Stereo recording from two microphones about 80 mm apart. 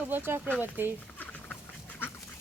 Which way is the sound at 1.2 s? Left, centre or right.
Centre.